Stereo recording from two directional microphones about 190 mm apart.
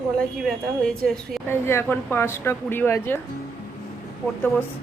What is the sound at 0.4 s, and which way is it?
A woman's voice, centre (ahead or behind).